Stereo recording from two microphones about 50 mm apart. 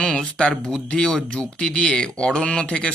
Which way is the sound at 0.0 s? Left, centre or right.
Left.